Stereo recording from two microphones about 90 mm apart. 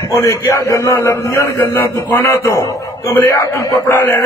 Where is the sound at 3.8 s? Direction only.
25° left (ahead or behind).